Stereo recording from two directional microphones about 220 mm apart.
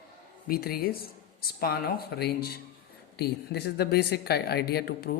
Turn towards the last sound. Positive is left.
turn(degrees=45)  # may be behind; listen again after turning